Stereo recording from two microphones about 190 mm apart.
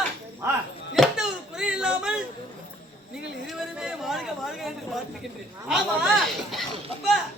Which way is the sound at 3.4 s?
Centre (ahead or behind).